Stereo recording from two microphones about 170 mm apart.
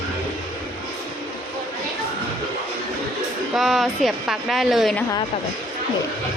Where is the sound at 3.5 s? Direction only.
Centre (ahead or behind).